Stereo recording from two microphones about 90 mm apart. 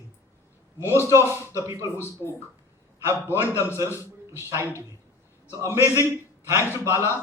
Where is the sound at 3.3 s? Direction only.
25° right (ahead or behind).